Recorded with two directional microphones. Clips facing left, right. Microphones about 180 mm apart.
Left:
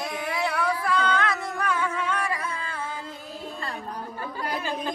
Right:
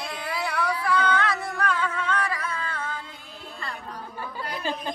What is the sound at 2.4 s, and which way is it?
Music, 30° left (ahead or behind).